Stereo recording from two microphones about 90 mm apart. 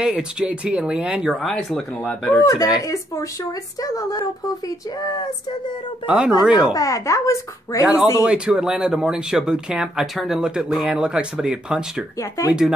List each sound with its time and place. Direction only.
0.0 s speech: 10° right (ahead or behind)
1.4 s speech: centre (ahead or behind)
2.0 s speech: 20° left (ahead or behind)
2.4 s speech: 35° left (ahead or behind)
6.0 s speech: 10° right (ahead or behind)
6.7 s speech: 35° left (ahead or behind)
7.8 s speech: 15° right (ahead or behind)